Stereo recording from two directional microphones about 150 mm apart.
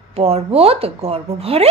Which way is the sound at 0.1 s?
40° right (ahead or behind).